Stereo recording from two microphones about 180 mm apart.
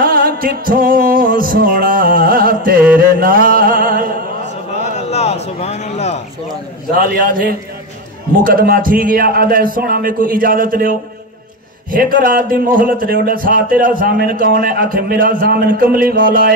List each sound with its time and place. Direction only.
0.0 s music: 55° right (ahead or behind)
4.9 s a sound: 35° left (ahead or behind)
7.0 s a man's voice: 50° right (ahead or behind)
12.3 s a man's voice: 50° right (ahead or behind)